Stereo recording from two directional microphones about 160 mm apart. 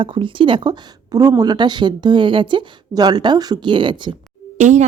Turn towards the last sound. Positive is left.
turn(degrees=-50)  # may be behind; listen again after turning